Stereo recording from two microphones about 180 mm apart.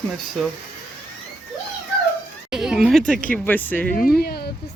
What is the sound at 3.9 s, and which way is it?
Speech, 55° left (ahead or behind).